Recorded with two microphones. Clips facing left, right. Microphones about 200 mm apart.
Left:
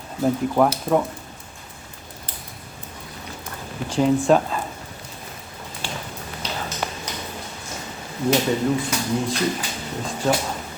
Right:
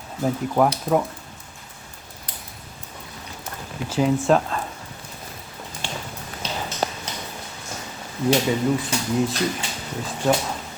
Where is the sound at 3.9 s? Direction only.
5° right (ahead or behind).